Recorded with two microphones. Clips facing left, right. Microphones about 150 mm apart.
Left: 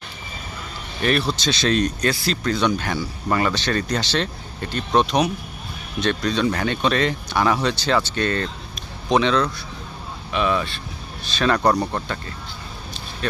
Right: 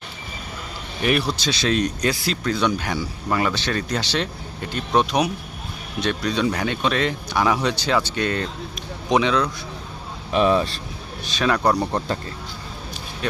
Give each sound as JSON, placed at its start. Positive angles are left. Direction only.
{"t": 1.0, "sound": "speech", "side_deg": -10}
{"t": 10.3, "sound": "speech", "side_deg": -35}
{"t": 11.3, "sound": "speech", "side_deg": -10}